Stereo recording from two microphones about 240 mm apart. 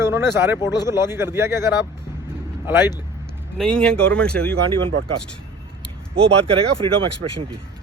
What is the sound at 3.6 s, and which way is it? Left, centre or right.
Speech, centre.